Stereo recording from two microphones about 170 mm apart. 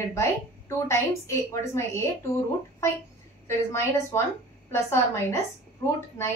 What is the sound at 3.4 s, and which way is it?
A woman's voice, 15° left (ahead or behind).